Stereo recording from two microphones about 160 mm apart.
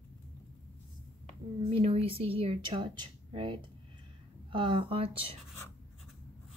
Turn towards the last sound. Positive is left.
turn(degrees=-35)  # may be behind; listen again after turning